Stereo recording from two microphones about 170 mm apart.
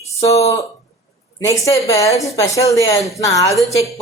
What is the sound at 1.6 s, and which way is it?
A woman's voice, 20° left (ahead or behind).